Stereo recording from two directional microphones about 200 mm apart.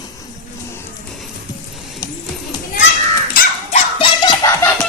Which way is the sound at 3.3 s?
45° left (ahead or behind).